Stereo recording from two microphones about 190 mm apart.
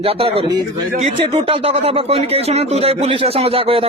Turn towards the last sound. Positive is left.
turn(degrees=-30)  # may be behind; listen again after turning